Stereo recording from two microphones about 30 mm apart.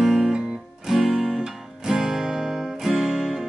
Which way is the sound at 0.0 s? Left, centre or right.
Centre.